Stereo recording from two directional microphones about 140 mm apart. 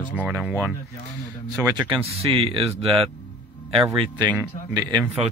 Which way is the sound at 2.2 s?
40° right (ahead or behind).